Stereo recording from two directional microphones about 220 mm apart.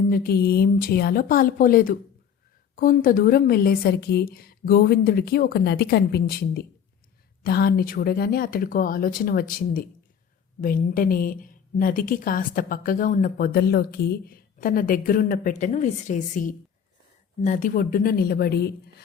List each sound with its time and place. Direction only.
0.1 s a woman's voice: 45° left (ahead or behind)